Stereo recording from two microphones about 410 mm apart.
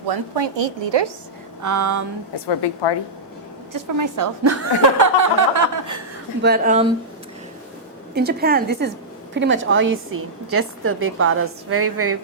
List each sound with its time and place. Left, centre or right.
0.1 s a woman's voice: right
1.6 s a woman's voice: right
3.7 s a woman's voice: right
6.4 s a woman's voice: right
8.1 s a woman's voice: right